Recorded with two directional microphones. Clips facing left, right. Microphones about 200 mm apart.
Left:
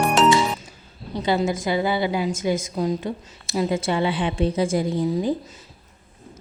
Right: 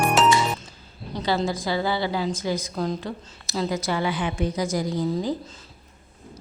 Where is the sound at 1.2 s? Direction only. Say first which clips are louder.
Left 3 dB; 20° left (ahead or behind).